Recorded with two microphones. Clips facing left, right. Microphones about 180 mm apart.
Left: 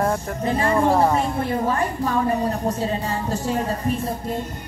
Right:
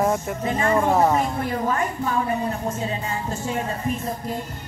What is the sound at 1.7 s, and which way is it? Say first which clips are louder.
A woman's voice: left 2 dB; 35° left (ahead or behind).